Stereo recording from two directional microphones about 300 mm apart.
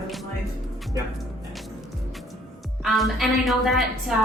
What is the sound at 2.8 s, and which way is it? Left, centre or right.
A woman's voice, centre.